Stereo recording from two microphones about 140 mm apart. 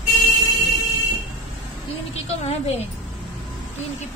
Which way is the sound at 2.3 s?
50° left (ahead or behind).